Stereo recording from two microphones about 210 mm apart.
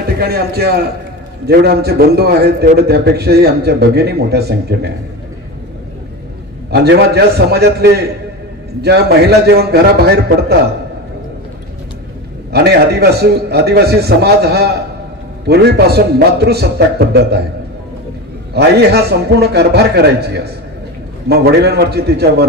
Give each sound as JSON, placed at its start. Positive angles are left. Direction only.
{"t": 0.0, "sound": "a man's voice", "side_deg": -50}
{"t": 6.7, "sound": "a man's voice", "side_deg": -50}
{"t": 12.5, "sound": "a man's voice", "side_deg": -50}
{"t": 18.5, "sound": "a man's voice", "side_deg": -50}